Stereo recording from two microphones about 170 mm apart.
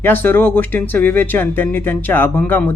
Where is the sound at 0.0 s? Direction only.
10° left (ahead or behind).